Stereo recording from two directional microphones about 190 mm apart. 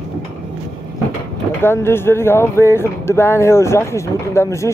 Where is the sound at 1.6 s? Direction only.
10° left (ahead or behind).